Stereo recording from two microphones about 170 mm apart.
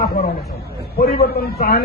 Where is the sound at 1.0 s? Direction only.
65° left (ahead or behind).